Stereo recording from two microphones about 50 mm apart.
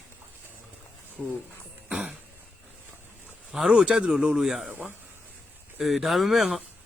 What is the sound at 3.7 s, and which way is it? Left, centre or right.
A man's voice, centre.